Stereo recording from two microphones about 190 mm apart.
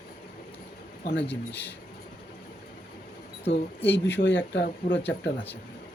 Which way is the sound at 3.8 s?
10° left (ahead or behind).